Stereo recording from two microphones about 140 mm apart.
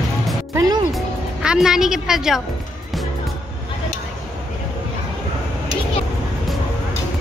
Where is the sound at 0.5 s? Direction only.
25° right (ahead or behind).